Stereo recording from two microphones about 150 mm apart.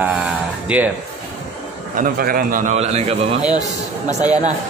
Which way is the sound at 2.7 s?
45° right (ahead or behind).